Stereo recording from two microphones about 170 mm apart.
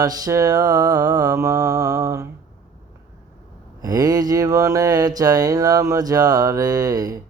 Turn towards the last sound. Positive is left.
turn(degrees=-20)  # may be behind; listen again after turning